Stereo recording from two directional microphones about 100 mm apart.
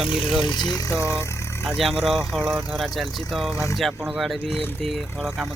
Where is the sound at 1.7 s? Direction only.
Centre (ahead or behind).